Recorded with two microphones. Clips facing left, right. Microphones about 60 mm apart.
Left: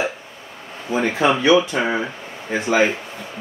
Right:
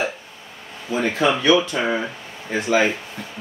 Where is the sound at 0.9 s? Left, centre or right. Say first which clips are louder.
Left 2 dB; left.